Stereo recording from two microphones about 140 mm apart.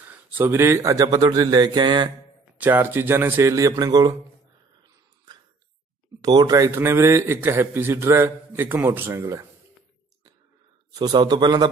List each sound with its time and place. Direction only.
0.1 s speech: 15° right (ahead or behind); by 2.0 s 35° right (ahead or behind)
2.5 s a man's voice: 10° right (ahead or behind)
6.2 s a man's voice: 25° right (ahead or behind)
11.0 s speech: 30° right (ahead or behind)